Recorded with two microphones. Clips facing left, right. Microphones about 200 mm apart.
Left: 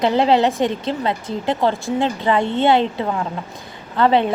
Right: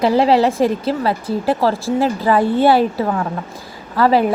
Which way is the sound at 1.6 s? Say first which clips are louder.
Right 2 dB; 30° right (ahead or behind).